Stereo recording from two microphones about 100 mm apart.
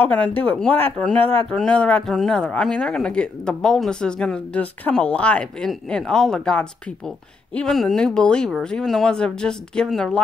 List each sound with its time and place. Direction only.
0.0 s speech: 15° left (ahead or behind)
1.2 s speech: 65° right (ahead or behind)
1.5 s speech: 10° left (ahead or behind)